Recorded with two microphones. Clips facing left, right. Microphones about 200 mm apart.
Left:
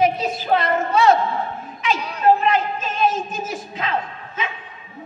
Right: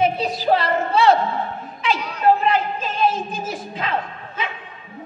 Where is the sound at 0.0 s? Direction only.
35° right (ahead or behind).